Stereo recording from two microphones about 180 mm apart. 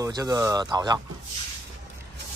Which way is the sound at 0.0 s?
20° right (ahead or behind).